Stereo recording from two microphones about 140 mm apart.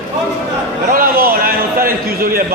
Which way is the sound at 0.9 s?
90° right.